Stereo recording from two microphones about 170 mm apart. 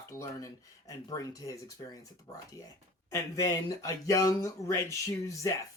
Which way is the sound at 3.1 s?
20° left (ahead or behind).